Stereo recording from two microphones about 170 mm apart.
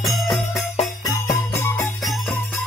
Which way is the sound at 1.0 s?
20° left (ahead or behind).